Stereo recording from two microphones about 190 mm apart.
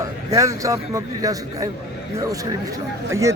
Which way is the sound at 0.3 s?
15° right (ahead or behind).